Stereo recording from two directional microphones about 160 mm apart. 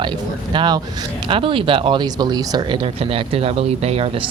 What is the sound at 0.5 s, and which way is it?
Speech, 30° right (ahead or behind).